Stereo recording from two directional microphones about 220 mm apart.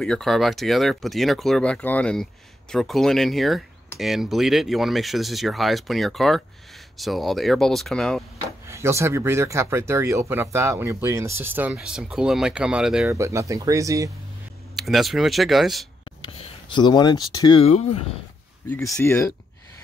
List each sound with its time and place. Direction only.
0.0 s speech: centre (ahead or behind)
8.6 s speech: 10° right (ahead or behind)
14.8 s speech: centre (ahead or behind)
16.2 s speech: 25° left (ahead or behind)
18.9 s speech: 10° left (ahead or behind)